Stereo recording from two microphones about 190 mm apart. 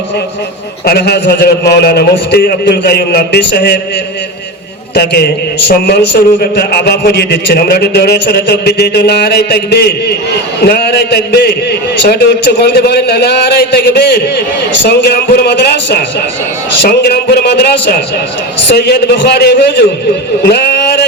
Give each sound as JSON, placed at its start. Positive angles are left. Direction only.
{"t": 0.9, "sound": "a man's voice", "side_deg": 55}
{"t": 4.9, "sound": "a man's voice", "side_deg": 60}
{"t": 20.4, "sound": "a sound", "side_deg": 60}